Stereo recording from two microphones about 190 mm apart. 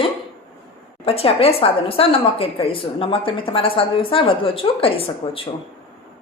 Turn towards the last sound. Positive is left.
turn(degrees=30)  # may be behind; listen again after turning